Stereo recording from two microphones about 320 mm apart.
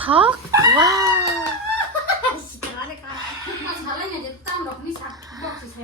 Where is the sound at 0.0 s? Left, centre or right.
Centre.